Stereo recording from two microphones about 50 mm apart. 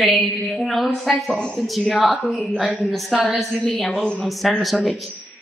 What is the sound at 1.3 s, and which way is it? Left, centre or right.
Speech, centre.